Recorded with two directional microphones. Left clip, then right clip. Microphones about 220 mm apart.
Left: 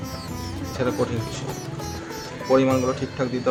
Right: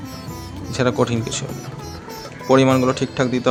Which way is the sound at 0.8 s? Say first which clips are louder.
Right 6 dB; 55° right (ahead or behind).